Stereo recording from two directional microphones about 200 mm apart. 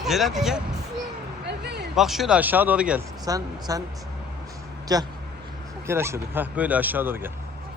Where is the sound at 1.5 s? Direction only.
55° right (ahead or behind).